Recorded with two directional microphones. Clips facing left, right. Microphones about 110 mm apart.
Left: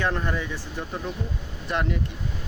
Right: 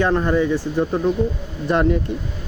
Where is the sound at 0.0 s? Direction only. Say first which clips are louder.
Right 9 dB; 35° right (ahead or behind).